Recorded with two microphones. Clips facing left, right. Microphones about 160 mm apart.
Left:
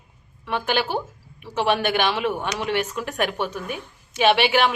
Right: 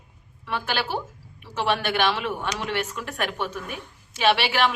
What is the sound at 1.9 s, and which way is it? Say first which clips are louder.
A woman's voice: left 2 dB; 5° left (ahead or behind).